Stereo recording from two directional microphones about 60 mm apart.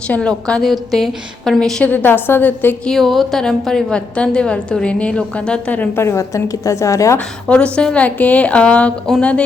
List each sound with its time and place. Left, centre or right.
0.2 s a woman's voice: centre
0.6 s a woman's voice: centre
1.8 s a woman's voice: left
2.8 s a woman's voice: centre; by 5.9 s left
5.9 s a woman's voice: left
6.3 s a woman's voice: left
7.4 s a woman's voice: centre
9.1 s a woman's voice: centre